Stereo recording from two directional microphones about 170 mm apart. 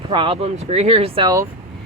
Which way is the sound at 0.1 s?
30° right (ahead or behind).